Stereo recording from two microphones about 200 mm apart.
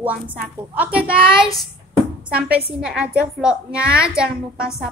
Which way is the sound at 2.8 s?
5° right (ahead or behind).